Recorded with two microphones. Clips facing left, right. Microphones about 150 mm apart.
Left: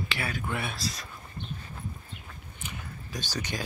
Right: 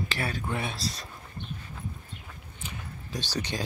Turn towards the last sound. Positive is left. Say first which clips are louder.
# right 2 dB
turn(degrees=-30)  # may be behind; listen again after turning